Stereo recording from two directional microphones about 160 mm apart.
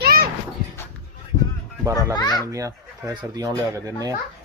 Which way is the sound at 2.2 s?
25° left (ahead or behind).